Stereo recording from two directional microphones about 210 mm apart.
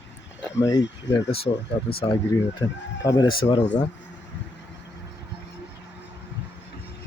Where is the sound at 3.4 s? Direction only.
30° left (ahead or behind).